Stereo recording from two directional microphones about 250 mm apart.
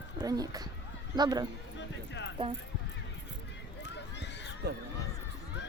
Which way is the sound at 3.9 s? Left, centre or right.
Left.